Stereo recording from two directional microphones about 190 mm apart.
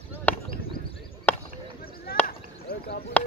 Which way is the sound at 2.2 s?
55° left (ahead or behind).